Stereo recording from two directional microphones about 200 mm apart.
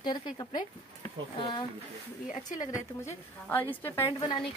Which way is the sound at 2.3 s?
40° left (ahead or behind).